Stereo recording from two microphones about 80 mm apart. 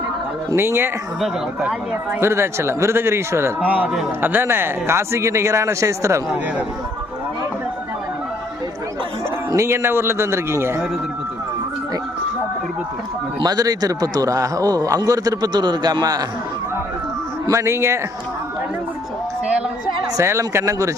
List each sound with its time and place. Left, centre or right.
0.5 s a man's voice: right
1.6 s speech: centre
2.2 s a man's voice: right
9.5 s a man's voice: right
13.4 s a man's voice: right
17.5 s a man's voice: right
20.1 s a man's voice: right